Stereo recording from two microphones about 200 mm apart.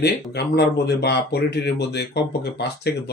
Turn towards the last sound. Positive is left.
turn(degrees=55)  # may be behind; listen again after turning